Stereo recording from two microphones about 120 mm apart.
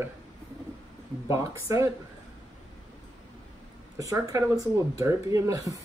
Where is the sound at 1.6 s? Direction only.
25° right (ahead or behind).